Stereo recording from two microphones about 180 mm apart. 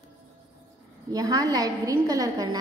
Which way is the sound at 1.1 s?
20° right (ahead or behind).